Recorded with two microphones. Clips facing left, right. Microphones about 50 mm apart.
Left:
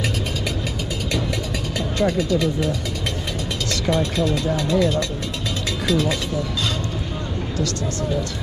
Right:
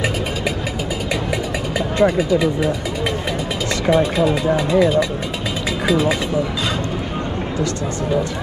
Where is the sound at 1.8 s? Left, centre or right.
Centre.